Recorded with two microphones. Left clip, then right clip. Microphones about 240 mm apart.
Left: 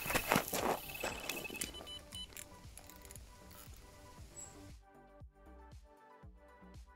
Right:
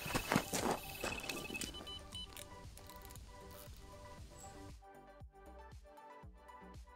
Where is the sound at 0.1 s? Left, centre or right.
Centre.